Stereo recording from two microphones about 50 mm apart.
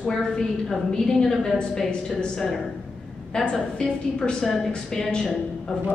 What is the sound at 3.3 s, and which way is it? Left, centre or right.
A woman's voice, centre.